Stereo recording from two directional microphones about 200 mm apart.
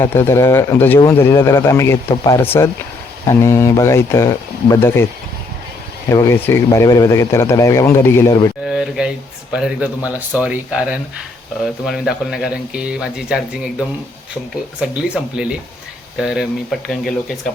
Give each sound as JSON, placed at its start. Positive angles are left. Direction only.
{"t": 0.0, "sound": "speech", "side_deg": 10}
{"t": 6.1, "sound": "speech", "side_deg": 15}
{"t": 8.6, "sound": "speech", "side_deg": -5}